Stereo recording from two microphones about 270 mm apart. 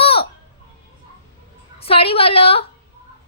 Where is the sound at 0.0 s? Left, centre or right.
Left.